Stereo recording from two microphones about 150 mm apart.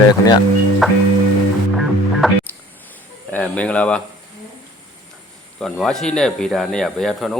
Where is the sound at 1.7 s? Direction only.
Centre (ahead or behind).